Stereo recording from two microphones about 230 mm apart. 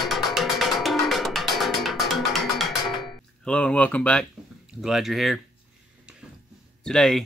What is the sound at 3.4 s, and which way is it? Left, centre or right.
Speech, centre.